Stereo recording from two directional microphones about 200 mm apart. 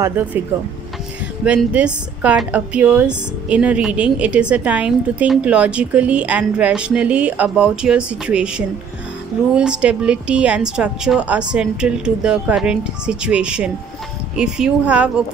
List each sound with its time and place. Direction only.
1.4 s a woman's voice: 5° right (ahead or behind)